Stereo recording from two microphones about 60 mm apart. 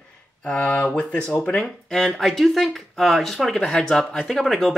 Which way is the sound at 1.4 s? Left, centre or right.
Centre.